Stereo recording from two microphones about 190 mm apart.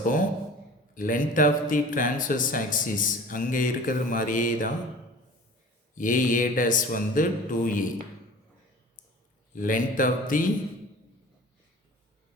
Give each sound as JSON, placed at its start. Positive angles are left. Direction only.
{"t": 0.0, "sound": "a sound", "side_deg": 45}
{"t": 0.9, "sound": "speech", "side_deg": 45}
{"t": 5.9, "sound": "speech", "side_deg": 45}
{"t": 9.6, "sound": "speech", "side_deg": 45}